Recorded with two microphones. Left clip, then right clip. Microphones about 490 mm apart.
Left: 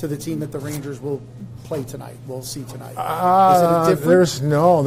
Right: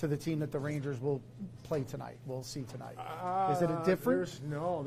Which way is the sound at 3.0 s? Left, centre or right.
Left.